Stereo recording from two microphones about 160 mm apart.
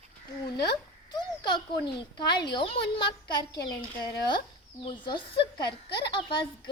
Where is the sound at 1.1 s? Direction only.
30° left (ahead or behind).